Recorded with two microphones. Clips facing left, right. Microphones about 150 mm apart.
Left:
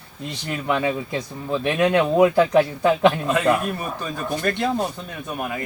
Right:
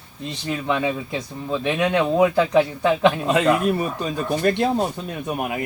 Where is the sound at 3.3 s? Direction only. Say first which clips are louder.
Right 2 dB; 20° right (ahead or behind).